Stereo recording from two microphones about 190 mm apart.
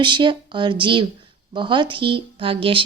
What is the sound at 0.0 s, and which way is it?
Speech, 25° right (ahead or behind).